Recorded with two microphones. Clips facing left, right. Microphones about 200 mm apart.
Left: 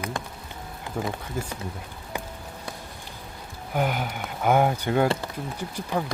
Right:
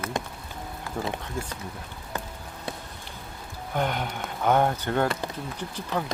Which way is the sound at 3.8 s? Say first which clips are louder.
Left 2 dB; 5° left (ahead or behind).